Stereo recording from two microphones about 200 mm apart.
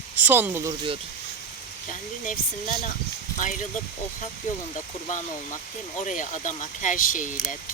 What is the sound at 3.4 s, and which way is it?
Speech, 40° left (ahead or behind).